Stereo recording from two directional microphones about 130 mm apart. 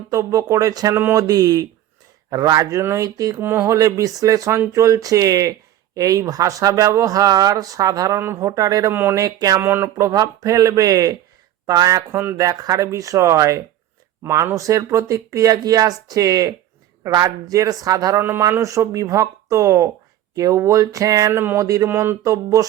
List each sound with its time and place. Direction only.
0.1 s speech: 25° right (ahead or behind)
3.4 s speech: 15° right (ahead or behind)
9.6 s speech: 15° right (ahead or behind)
12.1 s speech: 15° right (ahead or behind)